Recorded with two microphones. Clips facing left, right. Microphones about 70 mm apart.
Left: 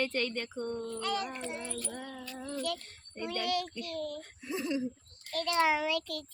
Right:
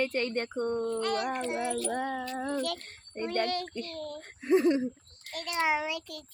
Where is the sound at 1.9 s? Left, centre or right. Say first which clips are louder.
Right 10 dB; right.